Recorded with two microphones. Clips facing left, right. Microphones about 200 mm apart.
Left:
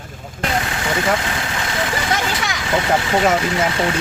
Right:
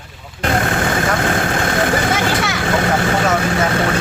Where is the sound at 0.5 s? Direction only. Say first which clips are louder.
Right 5 dB; 50° right (ahead or behind).